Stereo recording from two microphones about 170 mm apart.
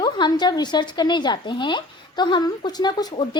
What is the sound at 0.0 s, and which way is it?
Speech, 25° left (ahead or behind).